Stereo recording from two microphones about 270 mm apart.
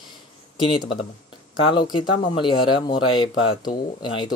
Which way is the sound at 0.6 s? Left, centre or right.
Centre.